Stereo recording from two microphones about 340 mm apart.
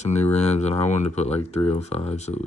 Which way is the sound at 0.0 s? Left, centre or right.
Centre.